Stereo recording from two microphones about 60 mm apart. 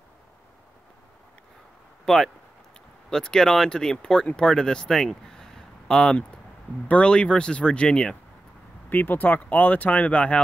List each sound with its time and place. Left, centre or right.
2.0 s speech: centre
6.9 s speech: centre
8.9 s speech: left